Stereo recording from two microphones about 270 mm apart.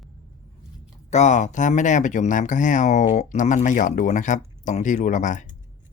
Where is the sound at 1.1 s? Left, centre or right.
Left.